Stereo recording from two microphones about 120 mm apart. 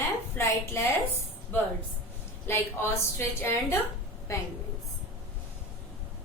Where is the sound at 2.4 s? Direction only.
20° left (ahead or behind).